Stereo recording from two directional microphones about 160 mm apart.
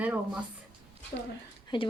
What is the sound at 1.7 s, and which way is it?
Speech, 30° left (ahead or behind).